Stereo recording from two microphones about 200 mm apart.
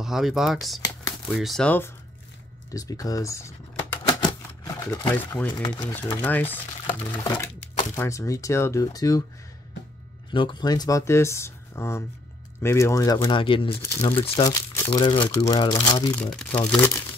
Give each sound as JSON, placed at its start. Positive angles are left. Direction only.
{"t": 0.0, "sound": "speech", "side_deg": 0}
{"t": 2.7, "sound": "typewriter", "side_deg": 20}
{"t": 5.6, "sound": "speech", "side_deg": 20}
{"t": 5.9, "sound": "speech", "side_deg": 10}
{"t": 10.3, "sound": "speech", "side_deg": 25}
{"t": 14.4, "sound": "speech", "side_deg": 15}
{"t": 16.3, "sound": "speech", "side_deg": 10}